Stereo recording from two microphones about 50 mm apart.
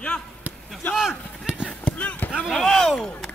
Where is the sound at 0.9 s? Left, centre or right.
Centre.